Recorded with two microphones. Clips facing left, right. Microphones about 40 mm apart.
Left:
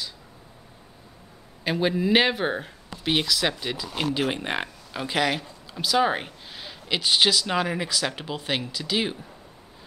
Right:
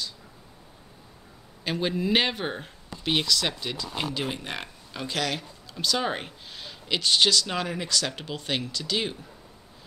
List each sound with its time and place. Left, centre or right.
1.6 s speech: centre
4.2 s speech: left
4.9 s speech: centre